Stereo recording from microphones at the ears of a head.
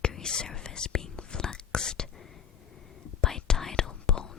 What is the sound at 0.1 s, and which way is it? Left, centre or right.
Whispering, left.